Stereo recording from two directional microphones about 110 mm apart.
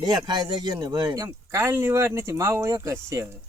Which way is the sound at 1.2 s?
25° right (ahead or behind).